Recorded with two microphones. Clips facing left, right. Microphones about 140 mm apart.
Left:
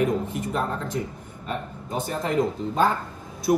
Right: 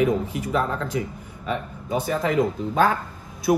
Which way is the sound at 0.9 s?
90° right.